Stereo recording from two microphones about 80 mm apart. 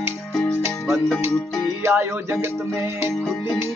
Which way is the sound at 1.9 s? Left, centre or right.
Right.